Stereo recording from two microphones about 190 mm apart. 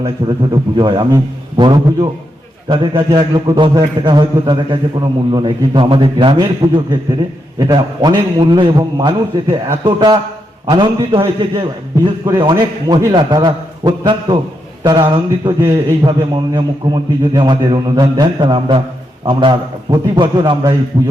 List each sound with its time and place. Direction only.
0.0 s a man's voice: 25° right (ahead or behind)
15.6 s a man's voice: 15° right (ahead or behind)